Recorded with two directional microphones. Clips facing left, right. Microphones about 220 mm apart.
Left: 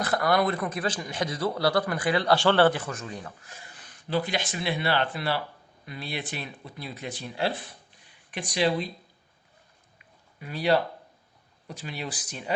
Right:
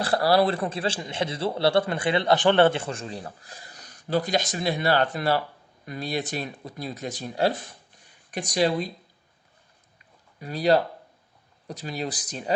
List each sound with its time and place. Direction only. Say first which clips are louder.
0.0 s a man's voice: right 3 dB; 30° right (ahead or behind)
10.4 s speech: right 3 dB; 40° right (ahead or behind)